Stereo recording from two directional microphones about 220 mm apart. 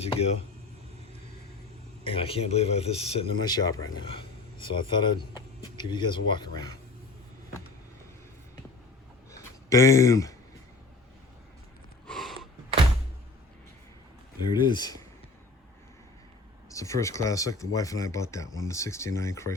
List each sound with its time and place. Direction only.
0.0 s speech: 25° left (ahead or behind)
2.0 s speech: 25° left (ahead or behind)
9.3 s a sound: 15° left (ahead or behind)
12.0 s a sound: centre (ahead or behind)
14.5 s speech: 20° left (ahead or behind)
16.6 s speech: 15° left (ahead or behind)